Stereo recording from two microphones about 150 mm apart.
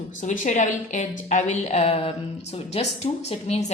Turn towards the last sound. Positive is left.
turn(degrees=45)  # may be behind; listen again after turning